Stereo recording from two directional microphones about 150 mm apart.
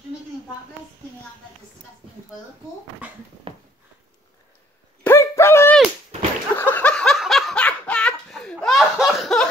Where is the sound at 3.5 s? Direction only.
35° right (ahead or behind).